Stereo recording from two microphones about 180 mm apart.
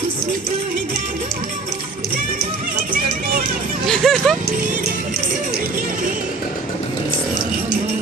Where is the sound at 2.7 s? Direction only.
55° right (ahead or behind).